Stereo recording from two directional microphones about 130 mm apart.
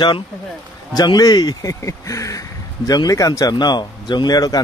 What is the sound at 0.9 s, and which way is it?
Speech, 30° left (ahead or behind).